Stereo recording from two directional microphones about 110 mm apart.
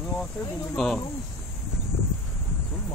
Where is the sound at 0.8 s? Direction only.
5° left (ahead or behind).